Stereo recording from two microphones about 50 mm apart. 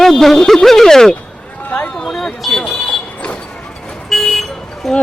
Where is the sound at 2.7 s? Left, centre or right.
Left.